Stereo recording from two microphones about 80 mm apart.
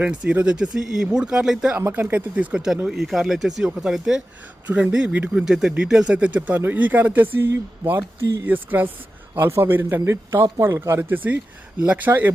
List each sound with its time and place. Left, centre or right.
0.0 s speech: centre
1.9 s speech: right
5.3 s speech: centre; by 10.0 s right
10.0 s speech: right
11.8 s speech: centre